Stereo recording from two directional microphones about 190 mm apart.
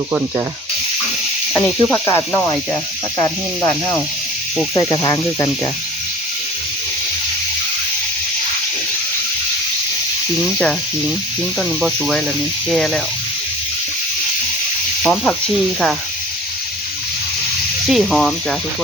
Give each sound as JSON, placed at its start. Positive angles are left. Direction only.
{"t": 1.5, "sound": "speech", "side_deg": 10}
{"t": 10.4, "sound": "speech", "side_deg": 5}
{"t": 11.8, "sound": "speech", "side_deg": -5}
{"t": 15.0, "sound": "speech", "side_deg": 5}
{"t": 17.8, "sound": "speech", "side_deg": 0}